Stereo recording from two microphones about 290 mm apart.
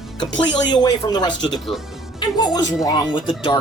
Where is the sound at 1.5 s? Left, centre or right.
Centre.